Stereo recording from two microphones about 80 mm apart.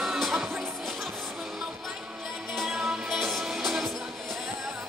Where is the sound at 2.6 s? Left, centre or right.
Centre.